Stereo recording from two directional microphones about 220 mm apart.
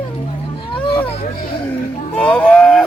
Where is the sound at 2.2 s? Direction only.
5° left (ahead or behind).